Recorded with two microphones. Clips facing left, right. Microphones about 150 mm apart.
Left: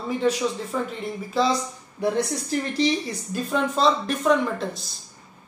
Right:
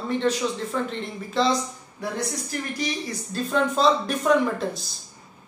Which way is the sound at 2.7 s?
30° left (ahead or behind).